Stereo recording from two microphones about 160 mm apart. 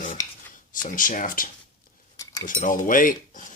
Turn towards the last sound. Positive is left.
turn(degrees=60)  # may be behind; listen again after turning